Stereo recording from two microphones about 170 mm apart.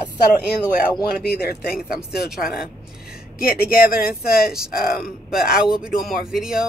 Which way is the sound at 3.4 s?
60° left (ahead or behind).